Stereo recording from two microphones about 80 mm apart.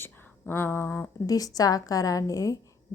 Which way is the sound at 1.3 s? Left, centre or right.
Left.